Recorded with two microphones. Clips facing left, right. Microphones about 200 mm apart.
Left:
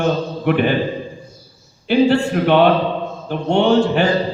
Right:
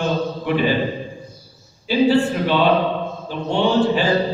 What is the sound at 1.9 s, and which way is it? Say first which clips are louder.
Speech: left 4 dB; 60° left (ahead or behind).